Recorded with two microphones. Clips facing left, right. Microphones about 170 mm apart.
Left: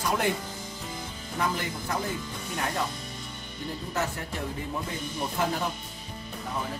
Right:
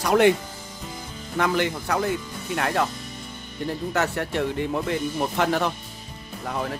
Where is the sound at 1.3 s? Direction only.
80° right.